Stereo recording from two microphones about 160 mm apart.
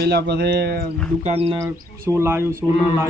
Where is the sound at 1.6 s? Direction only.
15° right (ahead or behind).